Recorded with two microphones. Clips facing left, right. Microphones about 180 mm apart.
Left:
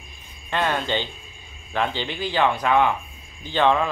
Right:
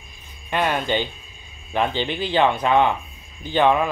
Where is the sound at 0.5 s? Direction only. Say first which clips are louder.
Right 2 dB; 15° right (ahead or behind).